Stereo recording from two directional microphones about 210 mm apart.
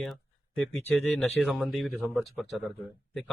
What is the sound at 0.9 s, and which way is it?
Speech, 5° left (ahead or behind).